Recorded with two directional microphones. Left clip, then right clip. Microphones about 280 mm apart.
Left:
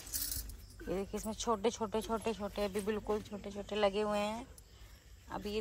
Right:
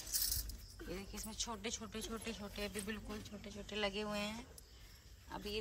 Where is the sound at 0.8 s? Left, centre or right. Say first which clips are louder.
Left 10 dB; centre.